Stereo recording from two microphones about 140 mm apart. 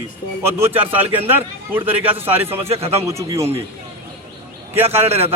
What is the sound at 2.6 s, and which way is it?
Speech, 45° right (ahead or behind).